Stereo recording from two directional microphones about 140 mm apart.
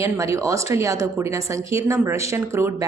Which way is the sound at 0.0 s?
20° right (ahead or behind).